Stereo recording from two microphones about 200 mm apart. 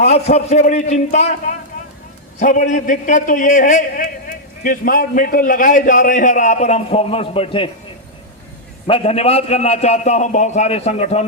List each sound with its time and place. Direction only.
0.0 s a man's voice: 30° left (ahead or behind)
8.9 s a man's voice: 30° left (ahead or behind)